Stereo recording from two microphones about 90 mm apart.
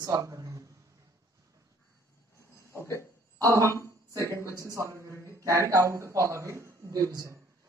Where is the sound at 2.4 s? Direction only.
30° left (ahead or behind).